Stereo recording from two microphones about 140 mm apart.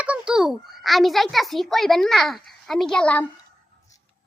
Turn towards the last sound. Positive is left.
turn(degrees=5)  # may be behind; listen again after turning